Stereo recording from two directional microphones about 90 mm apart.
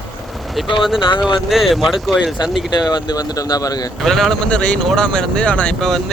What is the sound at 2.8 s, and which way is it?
Speech, 50° left (ahead or behind).